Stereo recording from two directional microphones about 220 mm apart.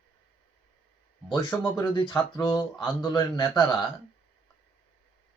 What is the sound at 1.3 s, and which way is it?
Speech, 15° left (ahead or behind).